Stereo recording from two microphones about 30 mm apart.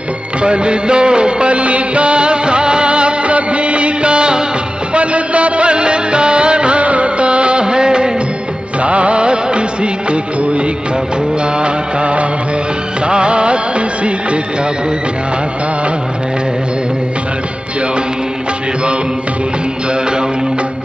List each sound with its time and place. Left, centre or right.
0.4 s music: right
1.5 s music: right
4.9 s music of bollywood: right
6.8 s music of bollywood: right
8.8 s music: right
11.5 s music: right